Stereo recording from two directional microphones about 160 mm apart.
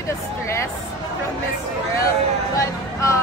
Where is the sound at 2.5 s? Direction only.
20° left (ahead or behind).